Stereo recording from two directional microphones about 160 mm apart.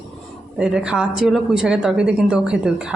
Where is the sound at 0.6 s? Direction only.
5° right (ahead or behind).